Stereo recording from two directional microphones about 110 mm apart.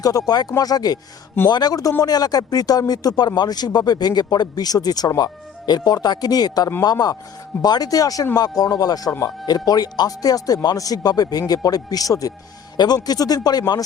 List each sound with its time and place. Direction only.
0.0 s speech: 35° left (ahead or behind)